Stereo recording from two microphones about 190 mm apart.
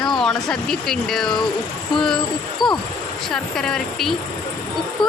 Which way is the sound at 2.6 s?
25° left (ahead or behind).